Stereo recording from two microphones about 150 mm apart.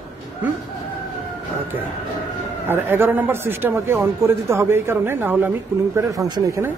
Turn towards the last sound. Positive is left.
turn(degrees=-20)  # may be behind; listen again after turning